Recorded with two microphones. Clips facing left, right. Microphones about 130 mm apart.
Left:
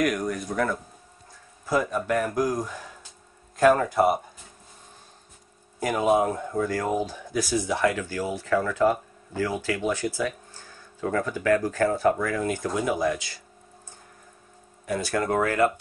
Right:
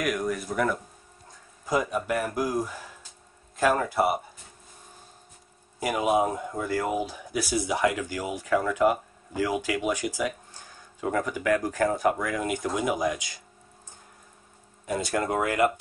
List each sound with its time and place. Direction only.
0.0 s speech: 5° right (ahead or behind)
5.8 s speech: 10° right (ahead or behind)
14.9 s speech: 20° right (ahead or behind)